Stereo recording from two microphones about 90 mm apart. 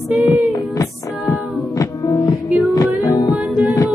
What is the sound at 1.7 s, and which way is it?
Music, 40° left (ahead or behind).